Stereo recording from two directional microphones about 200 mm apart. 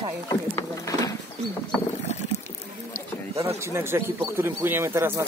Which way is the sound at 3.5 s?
15° right (ahead or behind).